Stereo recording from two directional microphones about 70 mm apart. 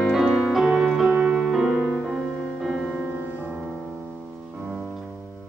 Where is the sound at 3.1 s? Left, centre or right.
Right.